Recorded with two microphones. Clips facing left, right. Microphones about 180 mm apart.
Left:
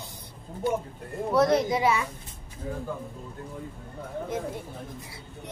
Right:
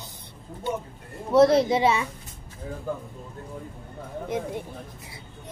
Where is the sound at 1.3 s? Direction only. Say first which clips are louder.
Right 5 dB; 30° right (ahead or behind).